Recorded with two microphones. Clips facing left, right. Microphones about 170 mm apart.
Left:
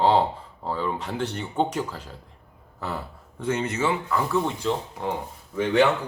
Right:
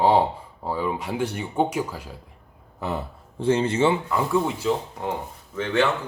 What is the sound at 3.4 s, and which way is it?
Speech, 30° right (ahead or behind).